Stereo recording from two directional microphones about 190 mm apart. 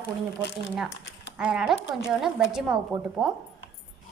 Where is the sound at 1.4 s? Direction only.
5° right (ahead or behind).